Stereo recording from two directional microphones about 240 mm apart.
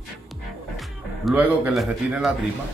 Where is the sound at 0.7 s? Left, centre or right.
Centre.